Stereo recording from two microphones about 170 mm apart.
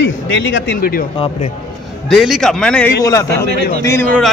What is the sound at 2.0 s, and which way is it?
Speech, centre (ahead or behind).